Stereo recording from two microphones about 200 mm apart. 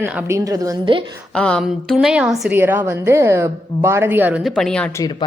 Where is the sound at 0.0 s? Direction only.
10° right (ahead or behind).